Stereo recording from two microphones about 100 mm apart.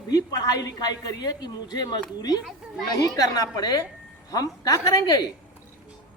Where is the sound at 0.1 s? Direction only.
40° left (ahead or behind).